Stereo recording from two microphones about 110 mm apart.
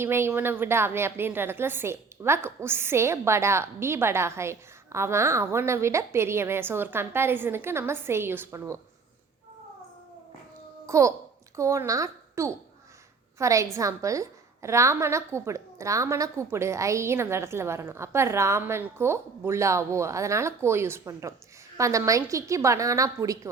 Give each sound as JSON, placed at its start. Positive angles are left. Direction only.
{"t": 0.0, "sound": "a woman's voice", "side_deg": -20}
{"t": 10.8, "sound": "a child's voice", "side_deg": -30}